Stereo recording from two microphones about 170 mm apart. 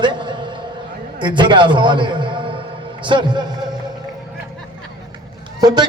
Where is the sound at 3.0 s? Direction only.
25° right (ahead or behind).